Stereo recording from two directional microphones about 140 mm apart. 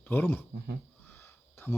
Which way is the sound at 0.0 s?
15° left (ahead or behind).